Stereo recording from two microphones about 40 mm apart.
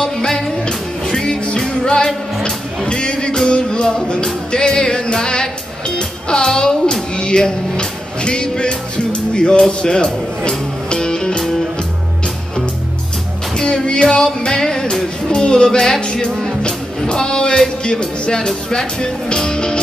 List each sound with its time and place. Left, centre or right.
0.0 s music: centre
13.7 s music: left
15.4 s speech: left